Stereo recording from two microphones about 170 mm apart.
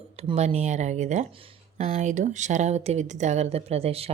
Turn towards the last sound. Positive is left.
turn(degrees=-35)  # may be behind; listen again after turning